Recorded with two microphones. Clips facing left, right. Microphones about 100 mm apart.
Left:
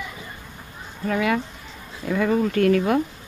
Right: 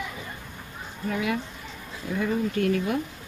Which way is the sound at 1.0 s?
70° left (ahead or behind).